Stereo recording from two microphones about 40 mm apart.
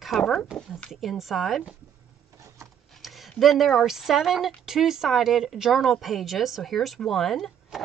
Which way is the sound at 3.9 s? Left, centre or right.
Centre.